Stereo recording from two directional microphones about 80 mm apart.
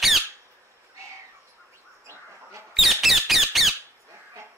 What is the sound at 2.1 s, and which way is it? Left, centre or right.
Chicken, right.